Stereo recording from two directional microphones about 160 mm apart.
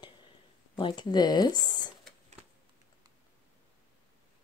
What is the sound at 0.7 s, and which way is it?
Speech, 30° left (ahead or behind).